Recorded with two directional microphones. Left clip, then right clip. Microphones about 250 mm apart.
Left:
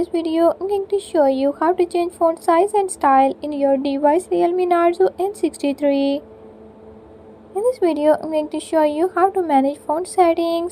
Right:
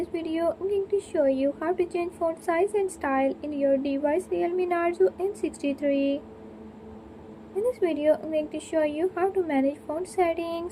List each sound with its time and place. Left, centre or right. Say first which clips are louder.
0.0 s a woman's voice: left 10 dB; left
7.7 s a woman's voice: left 8 dB; left